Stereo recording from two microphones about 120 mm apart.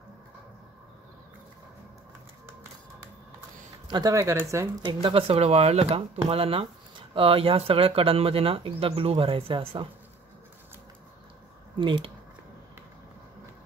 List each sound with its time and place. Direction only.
3.8 s speech: 40° right (ahead or behind)
4.1 s speech: 25° right (ahead or behind)
4.8 s speech: 50° right (ahead or behind)
11.8 s speech: 45° right (ahead or behind)